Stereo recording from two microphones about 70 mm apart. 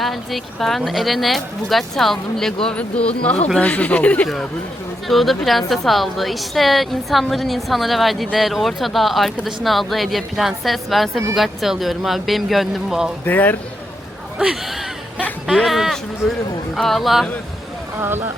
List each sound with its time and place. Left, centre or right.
0.0 s a woman's voice: centre; by 4.3 s left
5.0 s a woman's voice: centre
13.2 s speech: left
14.3 s a woman's voice: centre
18.0 s speech: right